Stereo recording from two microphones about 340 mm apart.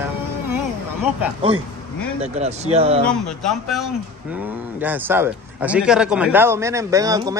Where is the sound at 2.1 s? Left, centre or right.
Centre.